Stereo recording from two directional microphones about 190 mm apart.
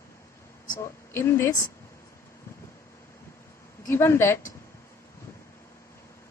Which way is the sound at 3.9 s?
15° left (ahead or behind).